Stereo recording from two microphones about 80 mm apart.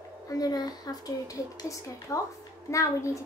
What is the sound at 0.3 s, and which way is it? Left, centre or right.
A woman's voice, left.